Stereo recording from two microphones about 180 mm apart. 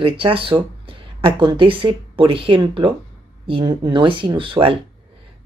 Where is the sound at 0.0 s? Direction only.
30° right (ahead or behind).